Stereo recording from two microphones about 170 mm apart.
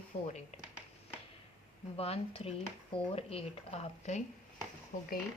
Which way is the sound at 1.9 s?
35° left (ahead or behind).